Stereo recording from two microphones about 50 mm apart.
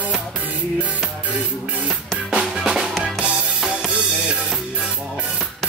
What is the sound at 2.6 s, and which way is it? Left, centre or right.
Music, centre.